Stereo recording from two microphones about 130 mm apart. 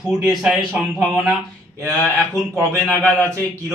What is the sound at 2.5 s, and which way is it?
Speech, 10° left (ahead or behind).